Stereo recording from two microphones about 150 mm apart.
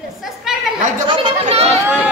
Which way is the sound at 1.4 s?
45° right (ahead or behind).